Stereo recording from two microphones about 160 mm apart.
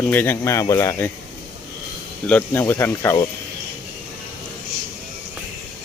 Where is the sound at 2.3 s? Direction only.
10° left (ahead or behind).